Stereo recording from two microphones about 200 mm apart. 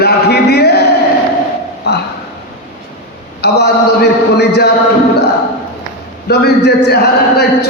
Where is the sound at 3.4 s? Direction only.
55° left (ahead or behind).